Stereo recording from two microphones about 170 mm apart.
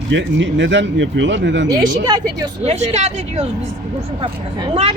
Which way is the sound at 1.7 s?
25° right (ahead or behind).